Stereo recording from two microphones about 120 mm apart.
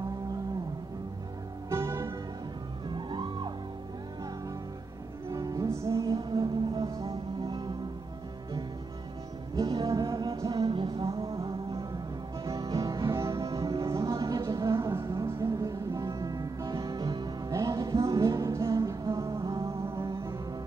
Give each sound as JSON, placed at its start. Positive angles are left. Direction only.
{"t": 1.7, "sound": "music", "side_deg": -25}
{"t": 2.9, "sound": "music", "side_deg": -40}
{"t": 5.3, "sound": "music", "side_deg": -30}
{"t": 9.6, "sound": "music", "side_deg": -35}
{"t": 10.7, "sound": "music", "side_deg": -45}